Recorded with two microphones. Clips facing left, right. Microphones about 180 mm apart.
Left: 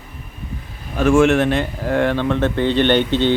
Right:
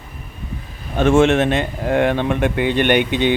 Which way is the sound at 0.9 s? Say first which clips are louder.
Even; 25° right (ahead or behind).